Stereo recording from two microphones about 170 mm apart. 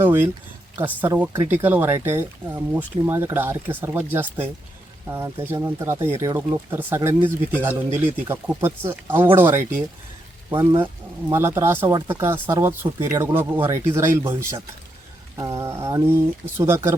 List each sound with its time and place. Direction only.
0.0 s speech: 15° right (ahead or behind)
15.4 s speech: 20° right (ahead or behind)